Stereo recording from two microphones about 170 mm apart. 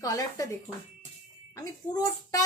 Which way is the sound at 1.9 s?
20° left (ahead or behind).